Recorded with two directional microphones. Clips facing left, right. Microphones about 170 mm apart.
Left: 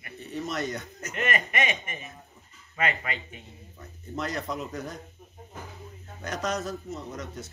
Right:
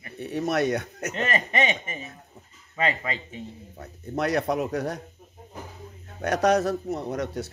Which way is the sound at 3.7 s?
65° right (ahead or behind).